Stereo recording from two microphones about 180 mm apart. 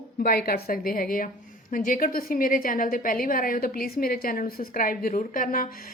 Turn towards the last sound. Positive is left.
turn(degrees=50)  # may be behind; listen again after turning